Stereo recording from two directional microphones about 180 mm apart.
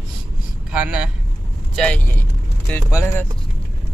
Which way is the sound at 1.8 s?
10° left (ahead or behind).